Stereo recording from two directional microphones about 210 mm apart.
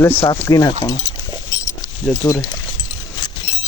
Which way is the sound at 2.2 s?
15° left (ahead or behind).